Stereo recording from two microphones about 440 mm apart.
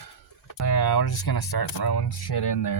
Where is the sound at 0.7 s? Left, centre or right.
Left.